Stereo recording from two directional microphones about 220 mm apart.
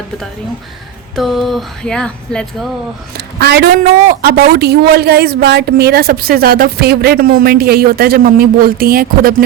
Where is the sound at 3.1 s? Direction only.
45° right (ahead or behind).